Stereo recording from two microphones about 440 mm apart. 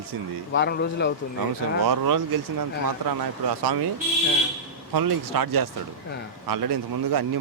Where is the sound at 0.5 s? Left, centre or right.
Left.